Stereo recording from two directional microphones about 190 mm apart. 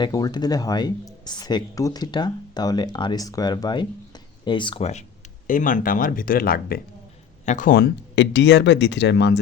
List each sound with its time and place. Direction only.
0.0 s speech: 20° left (ahead or behind); by 9.4 s 65° left (ahead or behind)